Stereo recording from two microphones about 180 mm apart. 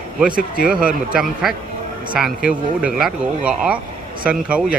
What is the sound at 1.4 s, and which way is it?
Speech, centre (ahead or behind).